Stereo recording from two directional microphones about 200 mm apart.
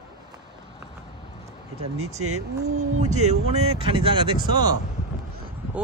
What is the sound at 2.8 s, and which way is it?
Speech, 35° right (ahead or behind).